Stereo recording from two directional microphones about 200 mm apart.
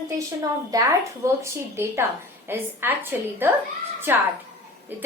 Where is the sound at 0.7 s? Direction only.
20° right (ahead or behind).